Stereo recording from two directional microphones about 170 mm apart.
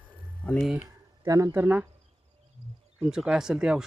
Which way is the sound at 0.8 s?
20° right (ahead or behind).